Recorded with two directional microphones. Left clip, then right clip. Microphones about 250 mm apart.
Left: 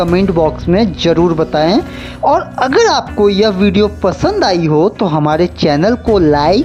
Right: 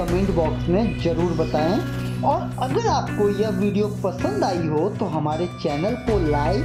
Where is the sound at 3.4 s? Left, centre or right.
Left.